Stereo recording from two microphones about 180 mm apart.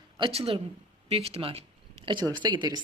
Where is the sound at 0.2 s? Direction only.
35° right (ahead or behind).